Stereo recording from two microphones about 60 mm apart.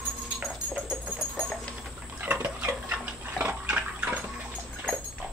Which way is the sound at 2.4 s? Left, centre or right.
Right.